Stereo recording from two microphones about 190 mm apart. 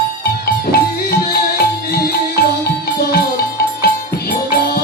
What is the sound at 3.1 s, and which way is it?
Music, 55° left (ahead or behind).